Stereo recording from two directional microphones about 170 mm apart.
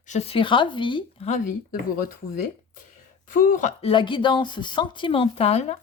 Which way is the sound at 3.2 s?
50° left (ahead or behind).